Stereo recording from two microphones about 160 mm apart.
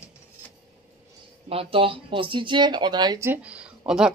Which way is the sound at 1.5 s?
35° right (ahead or behind).